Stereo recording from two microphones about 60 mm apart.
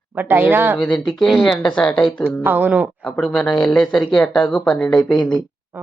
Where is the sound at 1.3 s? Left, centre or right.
Centre.